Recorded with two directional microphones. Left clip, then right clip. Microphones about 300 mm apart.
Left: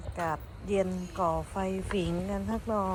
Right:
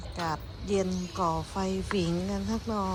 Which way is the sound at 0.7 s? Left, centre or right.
Centre.